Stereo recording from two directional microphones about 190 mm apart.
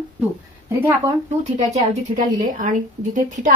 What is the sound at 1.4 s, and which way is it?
A woman's voice, 40° right (ahead or behind).